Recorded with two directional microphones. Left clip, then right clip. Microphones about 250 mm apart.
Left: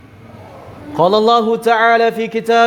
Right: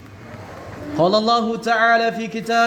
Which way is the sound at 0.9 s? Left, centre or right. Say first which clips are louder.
Left 5 dB; left.